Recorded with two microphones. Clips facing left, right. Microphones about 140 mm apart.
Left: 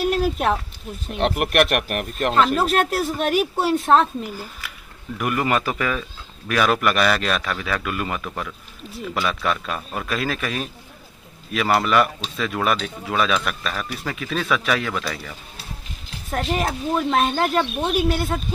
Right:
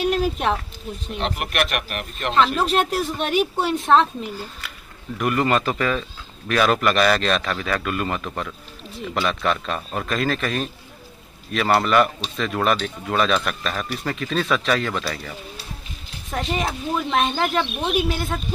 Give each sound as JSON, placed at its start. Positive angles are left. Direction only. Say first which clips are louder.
{"t": 0.0, "sound": "a sound", "louder": "left 1 dB", "side_deg": 0}
{"t": 1.4, "sound": "speech", "louder": "left 5 dB", "side_deg": 55}
{"t": 2.3, "sound": "speech", "louder": "even", "side_deg": 5}